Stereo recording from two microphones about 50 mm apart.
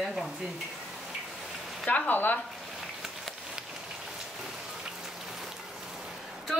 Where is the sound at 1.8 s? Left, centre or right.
Left.